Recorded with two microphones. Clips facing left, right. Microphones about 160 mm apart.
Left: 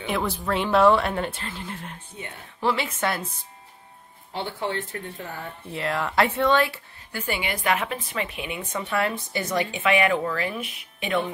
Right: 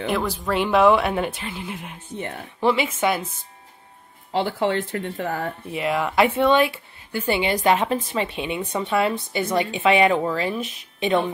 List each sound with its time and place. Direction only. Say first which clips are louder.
0.3 s speech: right 2 dB; 10° right (ahead or behind)
4.3 s speech: right 7 dB; 90° right
5.7 s speech: right 3 dB; 15° right (ahead or behind)
8.9 s speech: right 4 dB; 15° right (ahead or behind)
9.4 s speech: right 4 dB; 30° right (ahead or behind)